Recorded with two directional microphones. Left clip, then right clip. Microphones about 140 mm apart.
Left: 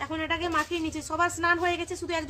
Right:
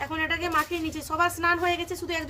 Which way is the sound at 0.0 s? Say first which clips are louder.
Right 2 dB; 10° left (ahead or behind).